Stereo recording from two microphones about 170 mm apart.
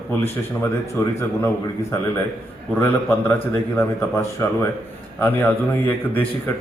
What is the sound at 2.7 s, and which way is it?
A man's voice, 15° left (ahead or behind).